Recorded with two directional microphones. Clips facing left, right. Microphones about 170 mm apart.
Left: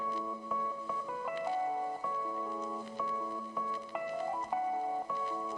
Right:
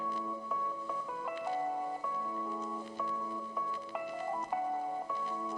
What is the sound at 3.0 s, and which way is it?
Music, centre (ahead or behind).